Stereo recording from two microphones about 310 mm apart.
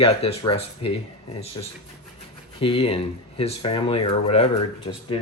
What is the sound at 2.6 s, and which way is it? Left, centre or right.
Speech, centre.